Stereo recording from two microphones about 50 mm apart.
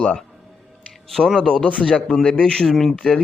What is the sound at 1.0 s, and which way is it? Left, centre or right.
Speech, centre.